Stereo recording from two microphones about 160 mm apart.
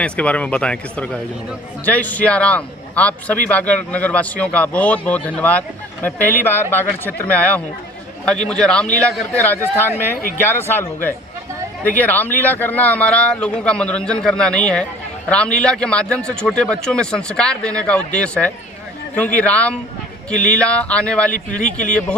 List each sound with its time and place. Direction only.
0.0 s a man's voice: 10° left (ahead or behind)
21.6 s speech: 50° left (ahead or behind)